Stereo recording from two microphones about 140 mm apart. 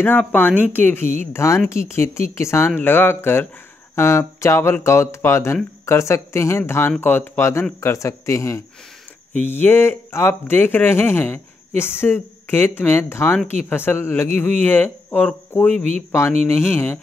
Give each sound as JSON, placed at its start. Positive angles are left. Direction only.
{"t": 0.0, "sound": "speech", "side_deg": 10}
{"t": 15.7, "sound": "speech", "side_deg": -50}
{"t": 16.1, "sound": "speech", "side_deg": 15}